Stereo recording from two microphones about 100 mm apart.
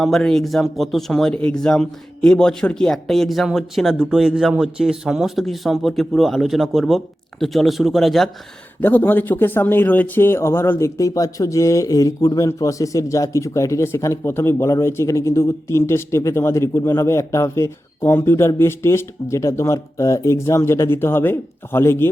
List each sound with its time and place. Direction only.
0.0 s a man's voice: 5° left (ahead or behind)
8.8 s speech: 20° left (ahead or behind)